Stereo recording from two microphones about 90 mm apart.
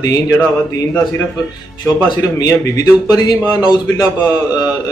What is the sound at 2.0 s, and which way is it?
A man's voice, 40° left (ahead or behind).